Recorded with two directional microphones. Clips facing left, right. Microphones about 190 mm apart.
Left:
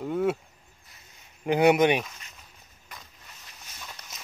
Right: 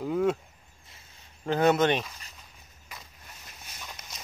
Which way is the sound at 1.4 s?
15° left (ahead or behind).